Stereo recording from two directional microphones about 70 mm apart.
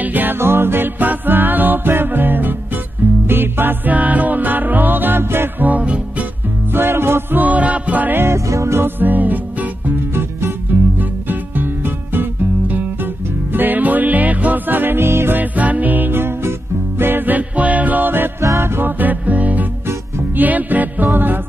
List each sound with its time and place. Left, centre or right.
0.0 s music: right
6.7 s music: right
8.5 s music: right
8.8 s music: right
18.4 s music: right
18.8 s music: right